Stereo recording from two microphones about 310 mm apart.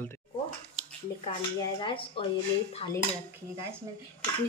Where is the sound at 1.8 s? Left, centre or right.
Centre.